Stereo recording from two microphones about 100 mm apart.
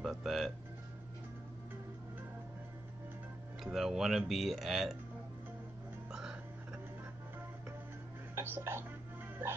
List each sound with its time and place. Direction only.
0.0 s speech: centre (ahead or behind)
3.6 s speech: centre (ahead or behind)
8.4 s music: 25° right (ahead or behind)